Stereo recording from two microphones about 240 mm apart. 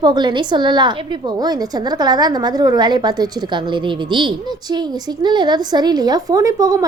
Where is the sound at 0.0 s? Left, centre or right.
Centre.